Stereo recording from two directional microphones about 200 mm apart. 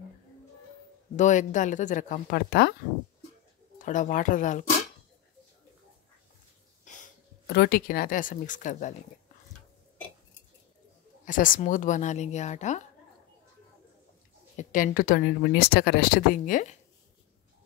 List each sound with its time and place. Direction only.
1.1 s a woman's voice: 40° left (ahead or behind)
3.7 s a woman's voice: 40° left (ahead or behind)
6.9 s a sound: 40° left (ahead or behind)
7.4 s a woman's voice: 55° left (ahead or behind); by 8.9 s 40° left (ahead or behind)
11.2 s a woman's voice: 40° left (ahead or behind)
14.6 s speech: 40° left (ahead or behind)